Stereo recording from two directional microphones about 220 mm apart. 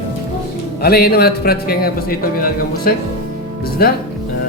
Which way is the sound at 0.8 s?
45° left (ahead or behind).